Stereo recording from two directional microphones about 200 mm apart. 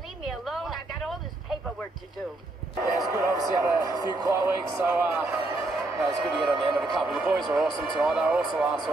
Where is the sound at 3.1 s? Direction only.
15° right (ahead or behind).